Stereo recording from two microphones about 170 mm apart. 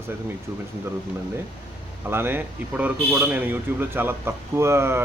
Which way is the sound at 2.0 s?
15° right (ahead or behind).